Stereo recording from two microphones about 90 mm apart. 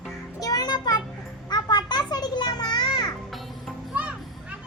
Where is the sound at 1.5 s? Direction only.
50° left (ahead or behind).